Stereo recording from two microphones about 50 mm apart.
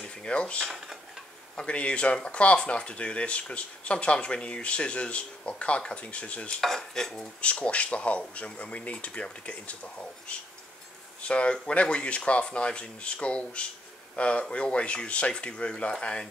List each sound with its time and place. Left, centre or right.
0.0 s mechanisms: centre
0.7 s dishes: centre
1.6 s speech: left
6.6 s dishes: centre
7.4 s speech: left